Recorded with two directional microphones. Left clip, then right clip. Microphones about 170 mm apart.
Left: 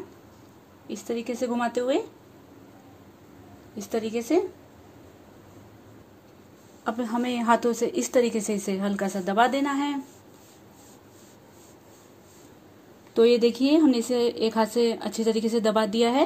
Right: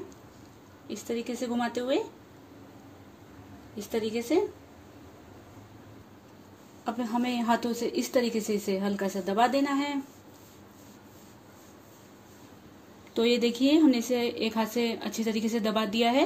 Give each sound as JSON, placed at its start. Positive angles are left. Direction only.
{"t": 0.8, "sound": "a woman's voice", "side_deg": 40}
{"t": 3.9, "sound": "a woman's voice", "side_deg": 40}
{"t": 6.8, "sound": "a woman's voice", "side_deg": 35}
{"t": 13.1, "sound": "a woman's voice", "side_deg": 40}